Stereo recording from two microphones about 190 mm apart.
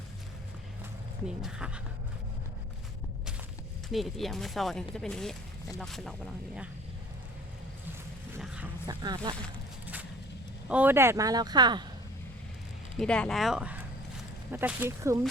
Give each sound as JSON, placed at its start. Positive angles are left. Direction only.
{"t": 1.4, "sound": "speech", "side_deg": -5}
{"t": 3.9, "sound": "speech", "side_deg": 0}
{"t": 8.4, "sound": "vehicle", "side_deg": -5}
{"t": 8.9, "sound": "speech", "side_deg": -20}
{"t": 9.8, "sound": "vehicle", "side_deg": -10}
{"t": 10.7, "sound": "speech", "side_deg": -10}
{"t": 13.0, "sound": "speech", "side_deg": 5}